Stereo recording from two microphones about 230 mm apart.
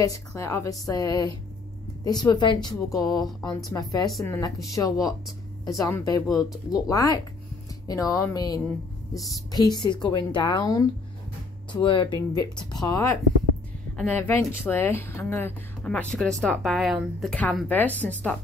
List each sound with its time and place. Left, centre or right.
0.0 s a woman's voice: centre